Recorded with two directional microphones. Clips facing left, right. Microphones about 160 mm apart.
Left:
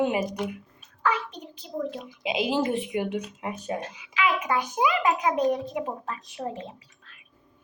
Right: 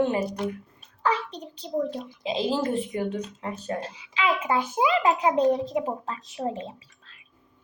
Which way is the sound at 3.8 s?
30° right (ahead or behind).